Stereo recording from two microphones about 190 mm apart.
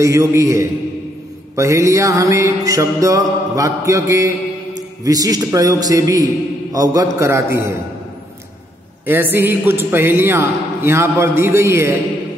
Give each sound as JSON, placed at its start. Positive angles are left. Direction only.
{"t": 0.0, "sound": "a man's voice", "side_deg": -15}
{"t": 9.0, "sound": "a man's voice", "side_deg": -10}